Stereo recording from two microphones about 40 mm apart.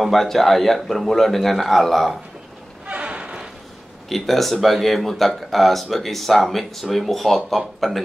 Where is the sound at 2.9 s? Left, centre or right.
Right.